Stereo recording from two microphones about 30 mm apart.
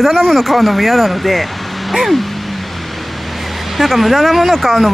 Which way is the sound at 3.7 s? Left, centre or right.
Centre.